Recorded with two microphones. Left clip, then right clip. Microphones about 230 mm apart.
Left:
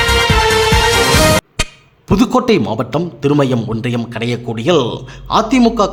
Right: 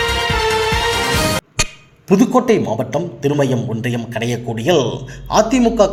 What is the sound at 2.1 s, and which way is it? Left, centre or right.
A man's voice, left.